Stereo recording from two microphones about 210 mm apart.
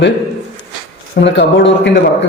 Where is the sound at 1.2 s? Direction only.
55° left (ahead or behind).